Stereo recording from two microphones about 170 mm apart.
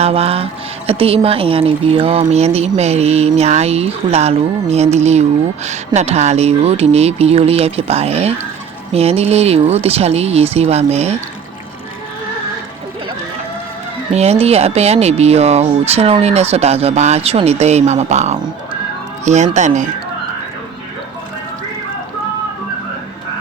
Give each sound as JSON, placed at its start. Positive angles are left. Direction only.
{"t": 0.0, "sound": "speech", "side_deg": -35}
{"t": 14.1, "sound": "speech", "side_deg": -40}